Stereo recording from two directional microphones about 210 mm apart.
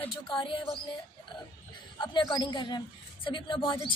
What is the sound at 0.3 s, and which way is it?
Speech, 25° left (ahead or behind).